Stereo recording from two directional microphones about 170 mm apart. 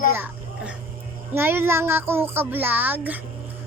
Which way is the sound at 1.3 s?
10° right (ahead or behind).